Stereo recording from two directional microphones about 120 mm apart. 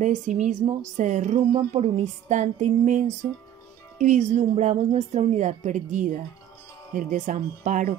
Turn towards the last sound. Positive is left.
turn(degrees=-90)